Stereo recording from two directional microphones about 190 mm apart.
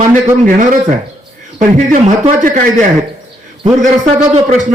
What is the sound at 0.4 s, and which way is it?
A man's voice, 40° right (ahead or behind).